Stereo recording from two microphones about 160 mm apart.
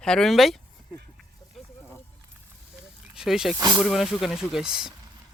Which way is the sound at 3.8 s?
Centre (ahead or behind).